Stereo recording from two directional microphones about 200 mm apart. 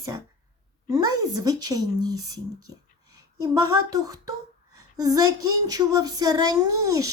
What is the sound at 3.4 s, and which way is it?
Speech, 15° right (ahead or behind).